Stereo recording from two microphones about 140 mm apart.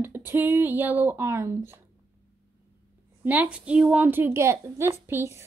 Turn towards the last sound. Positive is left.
turn(degrees=-20)  # may be behind; listen again after turning